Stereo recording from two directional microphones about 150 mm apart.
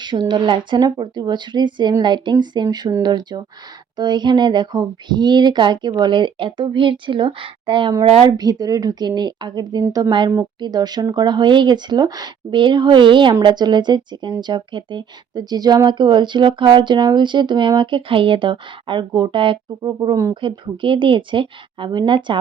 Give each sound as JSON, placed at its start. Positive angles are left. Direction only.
{"t": 0.0, "sound": "speech", "side_deg": -30}
{"t": 20.3, "sound": "speech", "side_deg": -35}